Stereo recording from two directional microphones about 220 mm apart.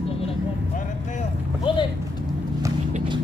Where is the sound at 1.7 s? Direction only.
20° left (ahead or behind).